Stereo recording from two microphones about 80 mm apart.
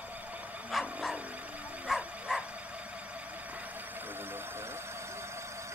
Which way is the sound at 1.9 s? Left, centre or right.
Centre.